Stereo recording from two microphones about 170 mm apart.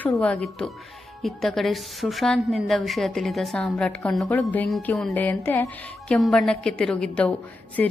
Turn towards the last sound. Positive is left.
turn(degrees=5)  # may be behind; listen again after turning